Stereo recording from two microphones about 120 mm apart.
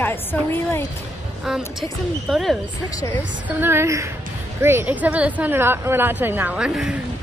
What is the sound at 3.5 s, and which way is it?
A woman's voice, 20° right (ahead or behind).